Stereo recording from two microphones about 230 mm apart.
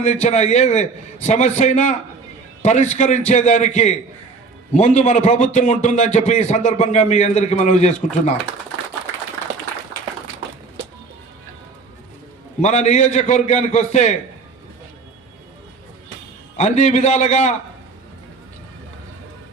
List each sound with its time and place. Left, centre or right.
0.0 s a man's voice: left
12.6 s speech: left
16.6 s speech: left